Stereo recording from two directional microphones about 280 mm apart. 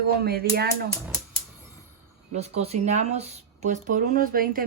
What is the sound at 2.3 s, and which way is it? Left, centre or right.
Speech, right.